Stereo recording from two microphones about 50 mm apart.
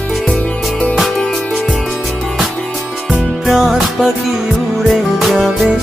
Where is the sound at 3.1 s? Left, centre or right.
Centre.